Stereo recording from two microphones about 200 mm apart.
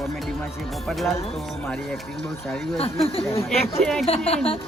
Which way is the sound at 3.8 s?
5° left (ahead or behind).